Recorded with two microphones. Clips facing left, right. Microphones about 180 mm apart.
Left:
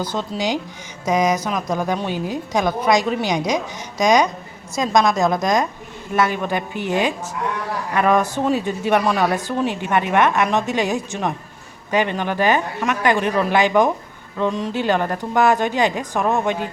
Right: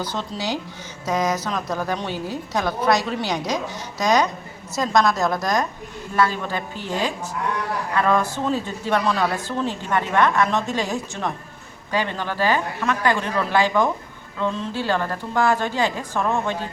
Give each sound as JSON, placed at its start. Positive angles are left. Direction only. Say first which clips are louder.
{"t": 0.1, "sound": "a woman's voice", "louder": "left 4 dB", "side_deg": 15}